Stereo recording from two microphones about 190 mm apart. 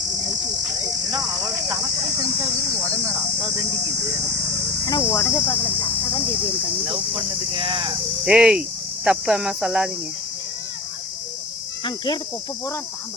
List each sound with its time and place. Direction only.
4.9 s cricket: 15° left (ahead or behind)
7.5 s speech: 25° right (ahead or behind)
8.2 s speech: 5° right (ahead or behind)
11.9 s speech: 25° left (ahead or behind)